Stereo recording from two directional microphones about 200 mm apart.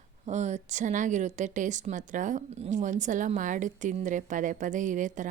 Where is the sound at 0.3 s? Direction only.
35° right (ahead or behind).